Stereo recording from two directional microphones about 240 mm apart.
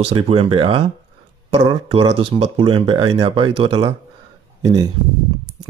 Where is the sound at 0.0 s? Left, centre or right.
Right.